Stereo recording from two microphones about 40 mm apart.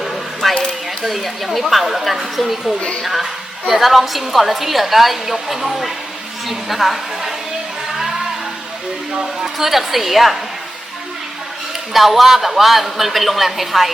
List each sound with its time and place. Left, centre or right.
0.4 s a sound: centre
1.0 s a woman's voice: centre
9.1 s a woman's voice: centre
11.9 s a woman's voice: centre